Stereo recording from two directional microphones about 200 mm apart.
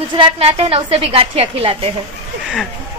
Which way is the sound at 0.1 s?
25° right (ahead or behind).